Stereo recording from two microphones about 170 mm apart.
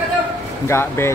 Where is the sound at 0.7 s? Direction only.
15° left (ahead or behind).